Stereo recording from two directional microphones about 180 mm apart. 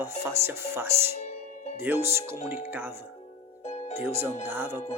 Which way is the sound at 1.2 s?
40° left (ahead or behind).